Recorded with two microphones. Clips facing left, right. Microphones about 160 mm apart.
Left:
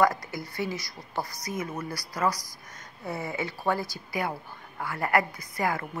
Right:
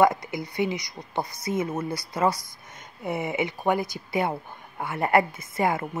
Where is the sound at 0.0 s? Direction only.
20° right (ahead or behind).